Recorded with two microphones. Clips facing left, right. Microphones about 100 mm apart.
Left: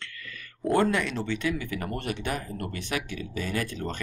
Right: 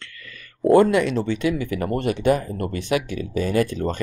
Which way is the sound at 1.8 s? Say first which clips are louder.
Right 9 dB; 90° right.